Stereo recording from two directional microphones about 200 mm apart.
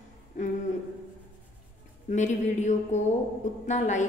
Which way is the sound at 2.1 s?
40° left (ahead or behind).